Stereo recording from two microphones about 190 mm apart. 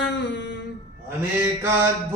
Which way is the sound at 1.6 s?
10° right (ahead or behind).